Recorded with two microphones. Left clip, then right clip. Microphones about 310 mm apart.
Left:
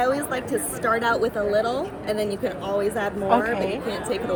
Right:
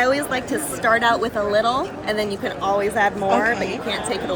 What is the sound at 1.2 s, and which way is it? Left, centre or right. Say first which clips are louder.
Speech: right 2 dB; right.